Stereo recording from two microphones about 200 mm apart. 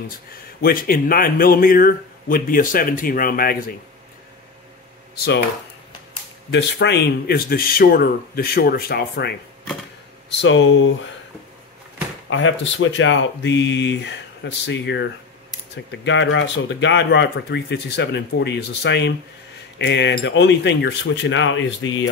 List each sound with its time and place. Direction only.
0.6 s speech: 50° left (ahead or behind)
5.1 s speech: 50° left (ahead or behind)
6.5 s speech: 60° left (ahead or behind)
10.4 s speech: 70° left (ahead or behind)
12.3 s speech: 75° left (ahead or behind)